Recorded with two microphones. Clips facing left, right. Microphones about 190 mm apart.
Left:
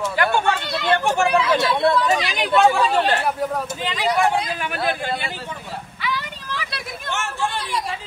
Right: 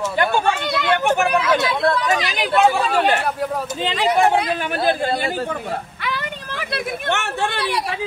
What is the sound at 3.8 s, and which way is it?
A man's voice, 30° right (ahead or behind).